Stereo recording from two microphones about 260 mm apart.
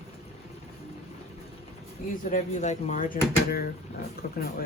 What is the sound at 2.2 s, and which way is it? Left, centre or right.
A woman's voice, left.